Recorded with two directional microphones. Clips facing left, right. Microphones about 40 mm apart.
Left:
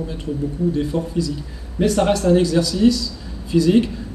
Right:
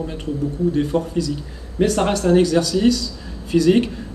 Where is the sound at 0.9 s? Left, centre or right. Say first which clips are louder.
Right 1 dB; right.